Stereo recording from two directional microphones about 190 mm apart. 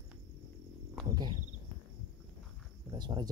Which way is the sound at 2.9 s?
25° right (ahead or behind).